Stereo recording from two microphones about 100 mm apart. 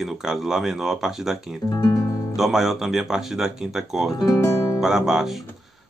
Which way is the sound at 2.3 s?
Centre (ahead or behind).